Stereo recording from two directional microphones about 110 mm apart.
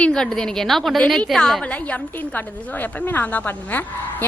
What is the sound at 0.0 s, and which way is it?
A woman's voice, 5° left (ahead or behind).